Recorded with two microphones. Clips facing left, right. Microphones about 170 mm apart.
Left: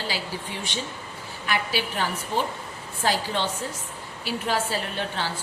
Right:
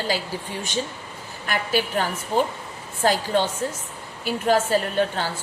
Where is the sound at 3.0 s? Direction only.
45° right (ahead or behind).